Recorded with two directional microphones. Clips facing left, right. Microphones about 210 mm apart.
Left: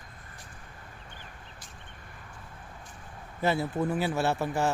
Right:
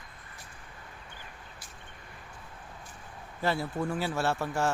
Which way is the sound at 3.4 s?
20° left (ahead or behind).